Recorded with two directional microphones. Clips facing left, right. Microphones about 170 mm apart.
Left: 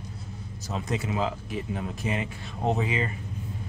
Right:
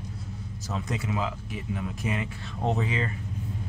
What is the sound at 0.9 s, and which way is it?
Speech, 30° left (ahead or behind).